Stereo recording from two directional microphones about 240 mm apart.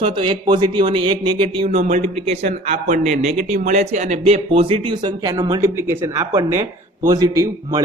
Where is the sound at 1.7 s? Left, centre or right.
Right; by 7.4 s centre.